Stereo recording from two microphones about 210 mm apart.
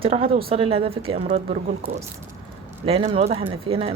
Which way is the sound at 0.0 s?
25° right (ahead or behind).